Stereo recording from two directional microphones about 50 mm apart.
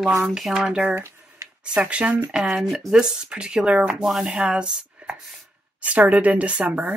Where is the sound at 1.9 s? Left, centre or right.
Right.